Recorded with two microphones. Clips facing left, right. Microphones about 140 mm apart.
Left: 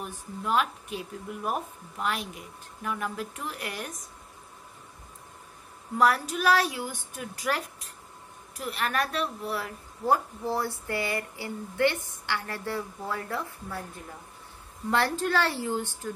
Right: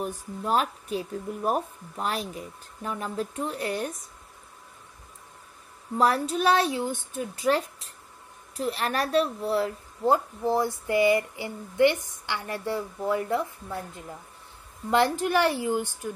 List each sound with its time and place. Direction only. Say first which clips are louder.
0.0 s speech: right 4 dB; 35° right (ahead or behind)
5.9 s a woman's voice: right 1 dB; 30° right (ahead or behind)